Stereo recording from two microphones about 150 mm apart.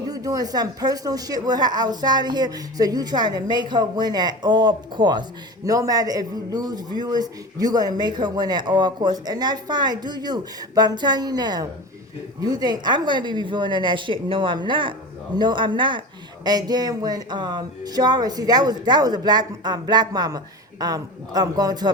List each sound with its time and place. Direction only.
0.1 s a woman's voice: 25° right (ahead or behind)